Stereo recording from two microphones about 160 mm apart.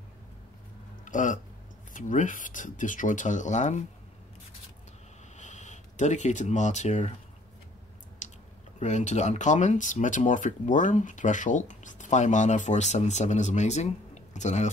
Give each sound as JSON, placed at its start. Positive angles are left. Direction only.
{"t": 1.0, "sound": "speech", "side_deg": 50}
{"t": 5.4, "sound": "speech", "side_deg": 50}
{"t": 8.2, "sound": "a sound", "side_deg": 50}
{"t": 8.7, "sound": "speech", "side_deg": 45}